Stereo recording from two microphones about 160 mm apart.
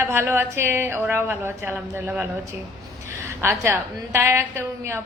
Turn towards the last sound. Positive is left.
turn(degrees=-15)  # may be behind; listen again after turning